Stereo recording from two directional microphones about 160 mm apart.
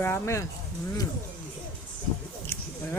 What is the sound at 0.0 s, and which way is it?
Speech, 15° left (ahead or behind).